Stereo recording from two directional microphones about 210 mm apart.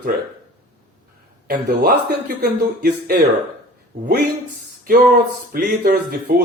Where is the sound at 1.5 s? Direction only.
45° right (ahead or behind).